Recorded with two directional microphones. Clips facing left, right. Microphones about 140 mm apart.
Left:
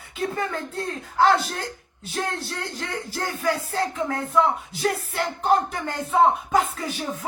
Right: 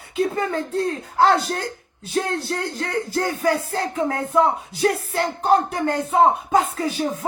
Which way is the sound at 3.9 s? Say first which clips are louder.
Right 5 dB; 30° right (ahead or behind).